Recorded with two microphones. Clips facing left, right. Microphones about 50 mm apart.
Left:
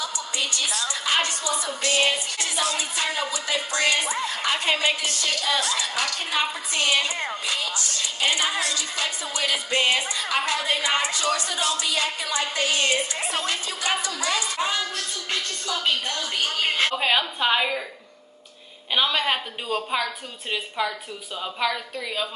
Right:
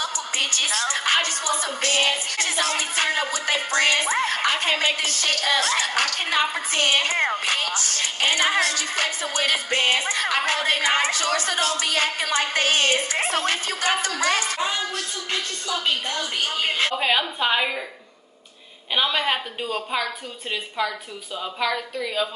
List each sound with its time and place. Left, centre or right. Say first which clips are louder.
0.0 s a woman's voice: right 2 dB; right
4.3 s a woman's voice: right 2 dB; right
16.6 s a woman's voice: even; centre
18.9 s a woman's voice: even; centre
21.5 s a woman's voice: right 1 dB; centre